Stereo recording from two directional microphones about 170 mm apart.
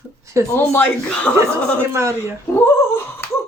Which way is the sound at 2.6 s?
15° left (ahead or behind).